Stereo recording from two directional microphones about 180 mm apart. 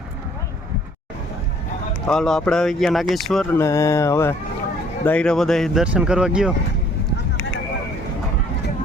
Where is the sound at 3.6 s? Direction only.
15° left (ahead or behind); by 6.5 s 5° right (ahead or behind).